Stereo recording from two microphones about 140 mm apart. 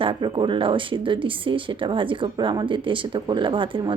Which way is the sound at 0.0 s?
35° right (ahead or behind).